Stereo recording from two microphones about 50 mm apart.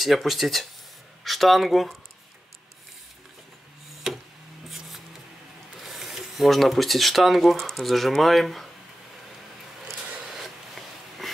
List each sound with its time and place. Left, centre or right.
0.0 s speech: centre
4.1 s tick-tock: centre
5.8 s speech: centre
10.4 s bee: centre